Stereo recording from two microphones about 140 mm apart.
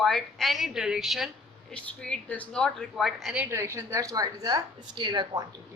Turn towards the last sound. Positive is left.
turn(degrees=-30)  # may be behind; listen again after turning